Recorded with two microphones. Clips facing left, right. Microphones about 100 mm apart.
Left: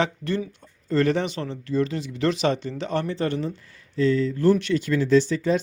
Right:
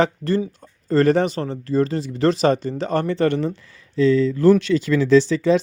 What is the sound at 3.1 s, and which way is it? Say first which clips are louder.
Speech: right 6 dB; 65° right (ahead or behind).